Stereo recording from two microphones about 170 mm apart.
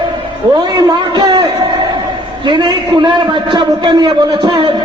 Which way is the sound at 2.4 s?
30° right (ahead or behind).